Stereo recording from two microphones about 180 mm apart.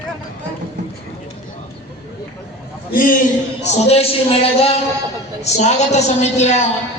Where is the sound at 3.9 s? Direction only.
35° left (ahead or behind).